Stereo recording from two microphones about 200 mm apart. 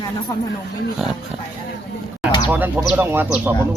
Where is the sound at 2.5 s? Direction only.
10° right (ahead or behind).